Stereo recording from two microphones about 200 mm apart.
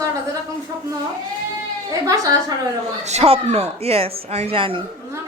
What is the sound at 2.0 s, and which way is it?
Speech, 15° right (ahead or behind).